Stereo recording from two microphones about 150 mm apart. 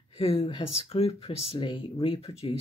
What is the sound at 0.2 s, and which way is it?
Speech, 40° left (ahead or behind).